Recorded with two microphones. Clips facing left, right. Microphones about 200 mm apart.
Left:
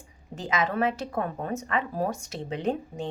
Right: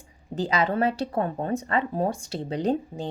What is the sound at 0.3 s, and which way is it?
A woman's voice, 35° right (ahead or behind).